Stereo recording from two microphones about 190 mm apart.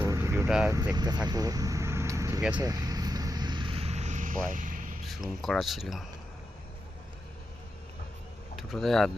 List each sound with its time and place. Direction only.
0.0 s vehicle: 15° right (ahead or behind)
0.4 s speech: centre (ahead or behind)
0.9 s vehicle: 20° right (ahead or behind); by 4.9 s 45° right (ahead or behind)
5.0 s speech: centre (ahead or behind)
8.5 s speech: centre (ahead or behind)